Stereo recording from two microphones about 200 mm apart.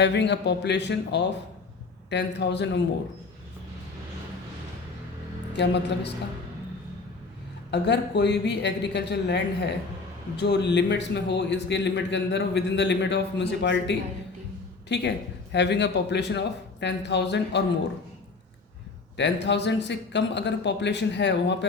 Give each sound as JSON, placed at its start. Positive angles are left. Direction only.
{"t": 0.0, "sound": "a man's voice", "side_deg": 60}
{"t": 5.5, "sound": "a man's voice", "side_deg": 60}
{"t": 7.7, "sound": "a man's voice", "side_deg": 60}
{"t": 19.1, "sound": "a man's voice", "side_deg": 60}